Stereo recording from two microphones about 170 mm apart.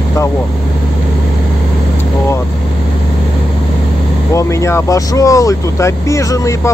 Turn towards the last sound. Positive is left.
turn(degrees=20)  # may be behind; listen again after turning